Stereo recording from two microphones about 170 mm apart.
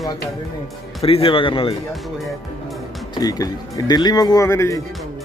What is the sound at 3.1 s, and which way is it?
Speech, 20° left (ahead or behind).